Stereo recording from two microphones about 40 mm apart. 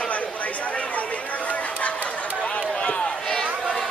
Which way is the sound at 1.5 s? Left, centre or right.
Left.